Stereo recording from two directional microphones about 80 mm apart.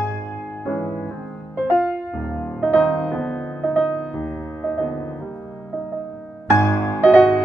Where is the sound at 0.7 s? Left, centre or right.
Left.